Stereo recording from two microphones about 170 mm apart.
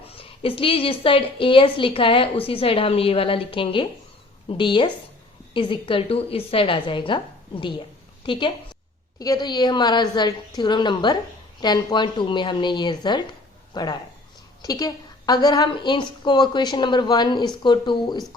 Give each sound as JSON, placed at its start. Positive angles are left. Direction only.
{"t": 0.0, "sound": "a woman's voice", "side_deg": 35}